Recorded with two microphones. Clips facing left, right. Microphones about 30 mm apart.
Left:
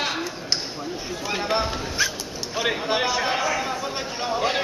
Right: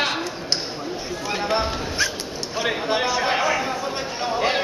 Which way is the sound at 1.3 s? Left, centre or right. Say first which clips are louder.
Right 1 dB; centre.